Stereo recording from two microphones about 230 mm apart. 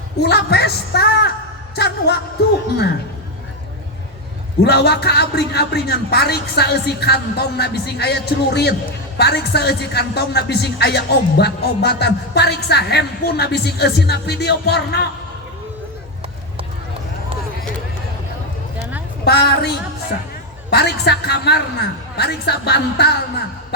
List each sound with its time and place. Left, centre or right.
0.2 s speech: left
4.6 s speech: left
18.8 s a sound: centre
19.2 s speech: left